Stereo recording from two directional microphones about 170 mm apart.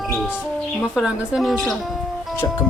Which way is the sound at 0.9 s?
Centre (ahead or behind).